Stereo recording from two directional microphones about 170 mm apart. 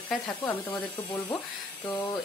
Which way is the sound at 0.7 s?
20° left (ahead or behind).